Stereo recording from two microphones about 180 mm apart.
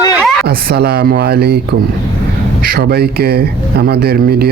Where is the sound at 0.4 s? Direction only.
65° right (ahead or behind).